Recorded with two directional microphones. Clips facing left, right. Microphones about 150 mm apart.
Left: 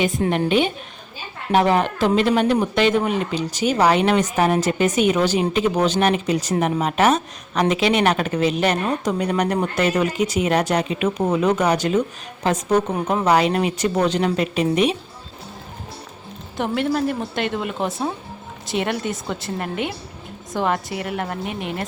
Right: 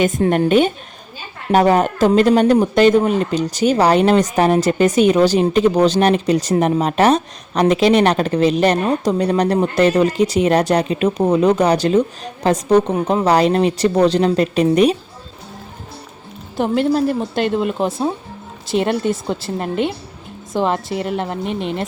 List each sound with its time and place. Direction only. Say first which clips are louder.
0.0 s a woman's voice: right 5 dB; 45° right (ahead or behind)
16.6 s a woman's voice: right 5 dB; 35° right (ahead or behind)